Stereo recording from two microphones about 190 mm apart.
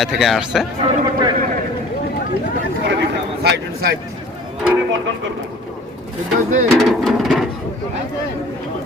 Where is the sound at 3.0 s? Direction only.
55° right (ahead or behind).